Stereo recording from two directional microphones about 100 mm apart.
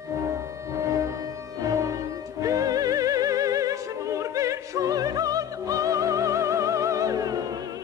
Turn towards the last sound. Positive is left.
turn(degrees=-35)  # may be behind; listen again after turning